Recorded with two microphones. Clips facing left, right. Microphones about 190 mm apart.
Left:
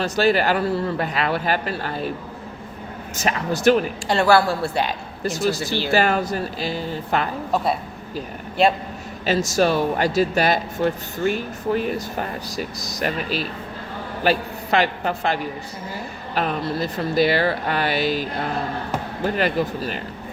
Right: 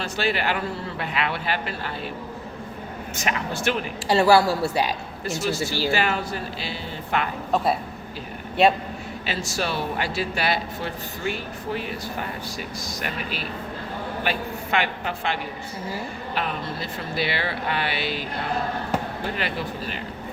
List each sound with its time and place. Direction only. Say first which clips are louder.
0.0 s speech: left 7 dB; 40° left (ahead or behind)
3.2 s speech: left 8 dB; 40° left (ahead or behind)
4.1 s a woman's voice: even; 5° right (ahead or behind)
5.2 s speech: left 4 dB; 40° left (ahead or behind)
9.2 s speech: left 10 dB; 45° left (ahead or behind)
19.4 s speech: left 7 dB; 45° left (ahead or behind)